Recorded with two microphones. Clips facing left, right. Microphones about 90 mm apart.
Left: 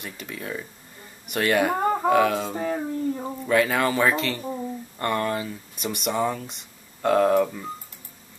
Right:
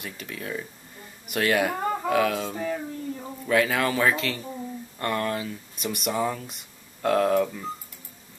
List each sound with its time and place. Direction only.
0.0 s speech: centre (ahead or behind)
1.8 s a sound: 30° left (ahead or behind)
2.0 s speech: centre (ahead or behind)
2.5 s speech: 30° left (ahead or behind)
3.3 s speech: centre (ahead or behind)